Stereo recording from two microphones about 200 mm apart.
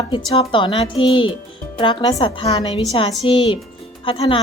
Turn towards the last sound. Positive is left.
turn(degrees=25)  # may be behind; listen again after turning